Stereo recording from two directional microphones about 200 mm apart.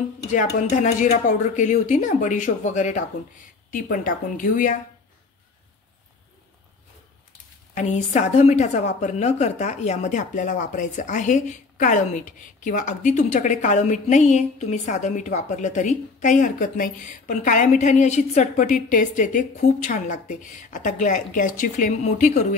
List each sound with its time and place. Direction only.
0.3 s a woman's voice: 40° left (ahead or behind)
7.7 s a woman's voice: 35° left (ahead or behind)